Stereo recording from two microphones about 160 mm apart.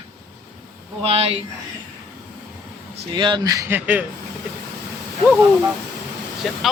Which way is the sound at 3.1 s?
30° right (ahead or behind).